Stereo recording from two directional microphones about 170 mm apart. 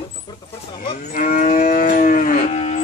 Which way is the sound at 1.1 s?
50° left (ahead or behind).